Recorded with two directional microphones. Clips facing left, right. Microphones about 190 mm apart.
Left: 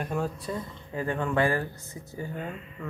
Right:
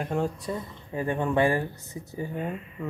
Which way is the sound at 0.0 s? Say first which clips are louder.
Right 2 dB; 20° right (ahead or behind).